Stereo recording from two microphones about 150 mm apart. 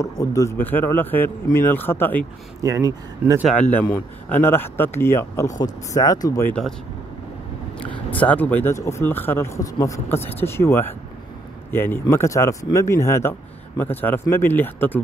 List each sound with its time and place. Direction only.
0.0 s speech: 20° left (ahead or behind)
2.6 s speech: 25° right (ahead or behind)
3.4 s speech: 10° left (ahead or behind)
8.1 s speech: 10° left (ahead or behind)